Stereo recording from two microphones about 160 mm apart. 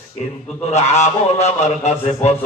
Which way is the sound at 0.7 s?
45° left (ahead or behind).